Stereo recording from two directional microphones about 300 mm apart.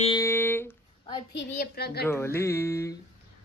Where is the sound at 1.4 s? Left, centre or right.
Left.